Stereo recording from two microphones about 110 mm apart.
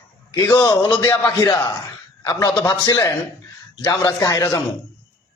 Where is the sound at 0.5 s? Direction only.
40° left (ahead or behind).